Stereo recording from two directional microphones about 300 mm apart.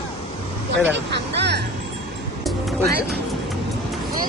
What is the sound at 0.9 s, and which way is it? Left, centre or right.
Speech, right.